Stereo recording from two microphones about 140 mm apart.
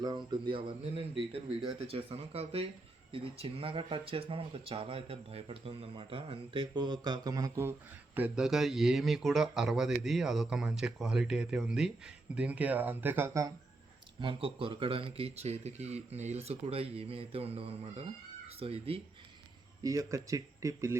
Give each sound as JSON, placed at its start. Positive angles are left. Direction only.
{"t": 0.0, "sound": "speech", "side_deg": -30}
{"t": 14.2, "sound": "speech", "side_deg": -40}
{"t": 19.8, "sound": "speech", "side_deg": -25}